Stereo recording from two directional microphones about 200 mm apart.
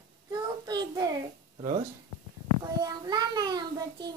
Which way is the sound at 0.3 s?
20° right (ahead or behind).